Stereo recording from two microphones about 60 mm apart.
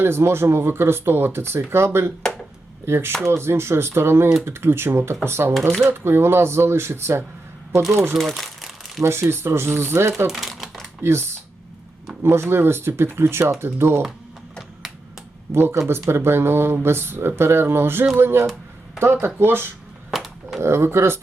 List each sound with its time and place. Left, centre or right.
0.0 s speech: right
8.1 s crumpling: centre
9.0 s speech: right
10.2 s typing: centre
11.0 s speech: right
15.5 s speech: right
20.1 s a sound: centre
20.6 s speech: right